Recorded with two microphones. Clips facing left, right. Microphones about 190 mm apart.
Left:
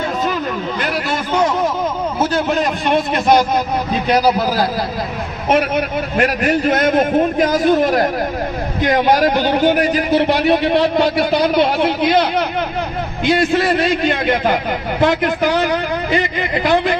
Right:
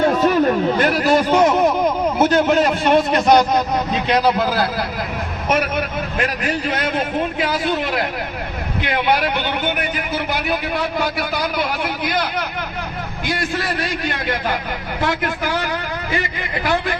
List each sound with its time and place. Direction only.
0.4 s speech: 45° right (ahead or behind)
1.5 s a sound: 15° right (ahead or behind)
2.9 s a man's voice: centre (ahead or behind)
6.1 s a man's voice: 45° left (ahead or behind); by 17.0 s 20° left (ahead or behind)